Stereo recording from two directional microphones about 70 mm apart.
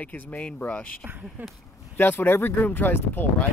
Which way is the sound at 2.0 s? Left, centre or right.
Left.